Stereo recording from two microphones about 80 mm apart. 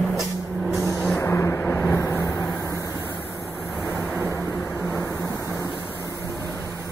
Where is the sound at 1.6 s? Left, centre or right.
Left.